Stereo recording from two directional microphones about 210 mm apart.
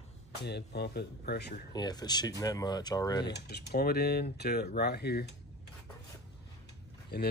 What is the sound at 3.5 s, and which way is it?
Speech, 50° left (ahead or behind).